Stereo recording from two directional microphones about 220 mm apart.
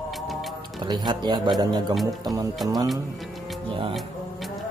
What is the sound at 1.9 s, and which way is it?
Speech, centre (ahead or behind).